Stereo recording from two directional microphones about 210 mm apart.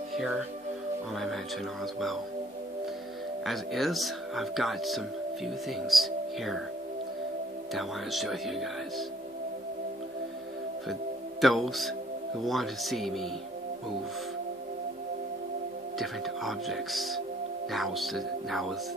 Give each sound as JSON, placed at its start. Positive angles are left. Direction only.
{"t": 1.1, "sound": "speech", "side_deg": 0}
{"t": 3.4, "sound": "speech", "side_deg": 0}
{"t": 7.7, "sound": "speech", "side_deg": 0}
{"t": 11.4, "sound": "speech", "side_deg": 0}
{"t": 16.0, "sound": "speech", "side_deg": 0}